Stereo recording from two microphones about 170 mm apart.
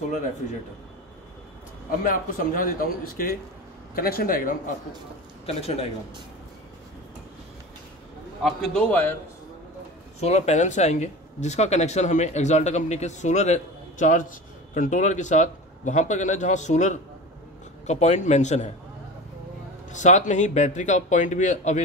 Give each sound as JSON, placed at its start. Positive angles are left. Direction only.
{"t": 1.9, "sound": "a man's voice", "side_deg": 55}
{"t": 8.4, "sound": "a man's voice", "side_deg": 0}
{"t": 10.2, "sound": "a man's voice", "side_deg": 40}
{"t": 19.9, "sound": "speech", "side_deg": 45}